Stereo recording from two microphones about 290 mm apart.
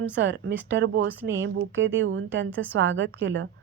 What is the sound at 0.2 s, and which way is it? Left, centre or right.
A woman's voice, right.